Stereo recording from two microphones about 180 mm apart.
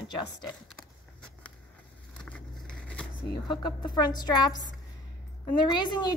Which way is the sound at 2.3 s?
5° left (ahead or behind).